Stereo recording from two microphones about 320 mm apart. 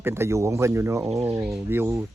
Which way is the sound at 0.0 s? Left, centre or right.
Centre.